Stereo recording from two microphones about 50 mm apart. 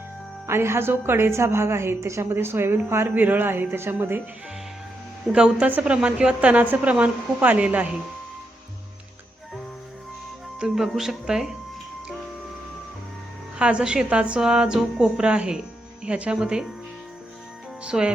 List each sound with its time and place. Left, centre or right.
0.4 s a woman's voice: right
2.3 s a woman's voice: right
3.2 s speech: right
5.3 s a woman's voice: centre
10.8 s speech: centre
13.6 s a woman's voice: centre
17.8 s a woman's voice: centre